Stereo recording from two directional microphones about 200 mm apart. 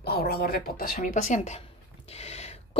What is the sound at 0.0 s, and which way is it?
Speech, 50° left (ahead or behind).